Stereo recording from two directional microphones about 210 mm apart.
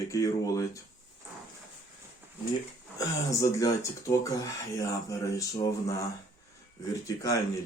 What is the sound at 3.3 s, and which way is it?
Speech, 15° left (ahead or behind).